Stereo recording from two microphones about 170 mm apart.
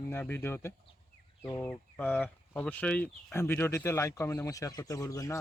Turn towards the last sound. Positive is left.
turn(degrees=20)  # may be behind; listen again after turning